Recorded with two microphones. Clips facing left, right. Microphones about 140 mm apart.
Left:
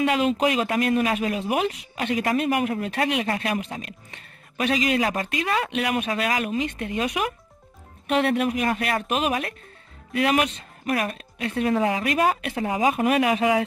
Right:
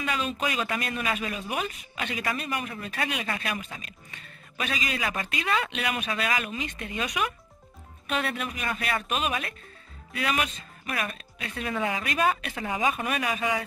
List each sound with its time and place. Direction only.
0.0 s speech: 75° left (ahead or behind); by 1.4 s 60° left (ahead or behind)
1.5 s speech: 75° left (ahead or behind)
2.0 s speech: 45° left (ahead or behind)
2.3 s a man's voice: 80° left
2.7 s speech: 60° left (ahead or behind)
3.5 s speech: 60° left (ahead or behind)
5.0 s speech: 40° left (ahead or behind)
5.7 s speech: 50° left (ahead or behind)
8.1 s speech: 55° left (ahead or behind)
9.0 s speech: 60° left (ahead or behind)
11.0 s speech: 50° left (ahead or behind)
12.9 s speech: 65° left (ahead or behind)